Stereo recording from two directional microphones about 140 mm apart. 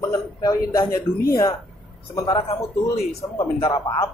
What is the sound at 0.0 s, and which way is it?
A man's voice, 20° left (ahead or behind).